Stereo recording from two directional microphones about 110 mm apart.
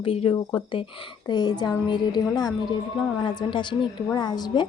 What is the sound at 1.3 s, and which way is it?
A woman's voice, 40° left (ahead or behind).